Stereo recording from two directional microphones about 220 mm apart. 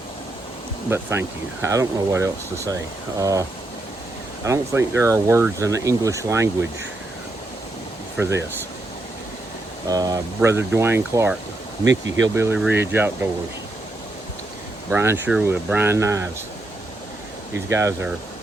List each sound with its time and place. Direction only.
0.9 s speech: 10° right (ahead or behind)
4.4 s speech: 15° right (ahead or behind)
9.9 s speech: 15° right (ahead or behind)
11.9 s speech: 60° right (ahead or behind)
12.3 s speech: 10° right (ahead or behind)
14.8 s speech: 10° right (ahead or behind)
17.7 s speech: 10° right (ahead or behind)